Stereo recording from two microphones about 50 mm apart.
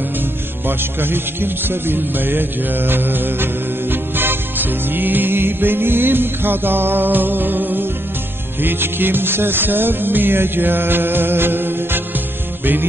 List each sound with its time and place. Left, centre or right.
0.7 s music: right